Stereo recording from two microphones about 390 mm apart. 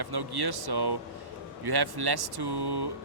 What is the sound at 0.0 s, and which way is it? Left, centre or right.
Speech, right.